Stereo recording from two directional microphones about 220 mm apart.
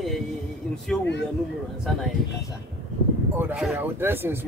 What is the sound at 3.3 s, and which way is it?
Speech, 5° right (ahead or behind).